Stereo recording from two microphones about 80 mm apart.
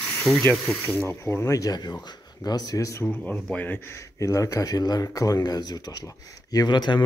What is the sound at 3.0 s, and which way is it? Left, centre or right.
Speech, left.